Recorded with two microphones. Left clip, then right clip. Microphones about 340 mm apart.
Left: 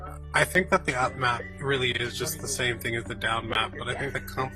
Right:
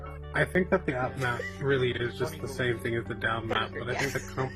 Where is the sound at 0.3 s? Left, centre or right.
Left.